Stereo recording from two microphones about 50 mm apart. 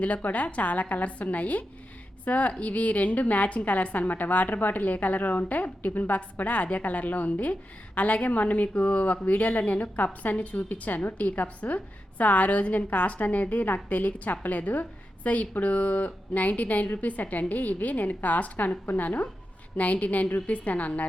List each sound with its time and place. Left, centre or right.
0.0 s a woman's voice: left